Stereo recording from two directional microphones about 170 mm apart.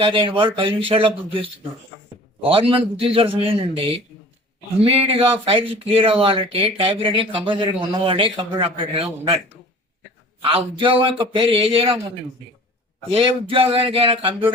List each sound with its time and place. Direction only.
0.0 s speech: 30° right (ahead or behind)
10.4 s speech: 30° right (ahead or behind)
13.1 s speech: 30° right (ahead or behind)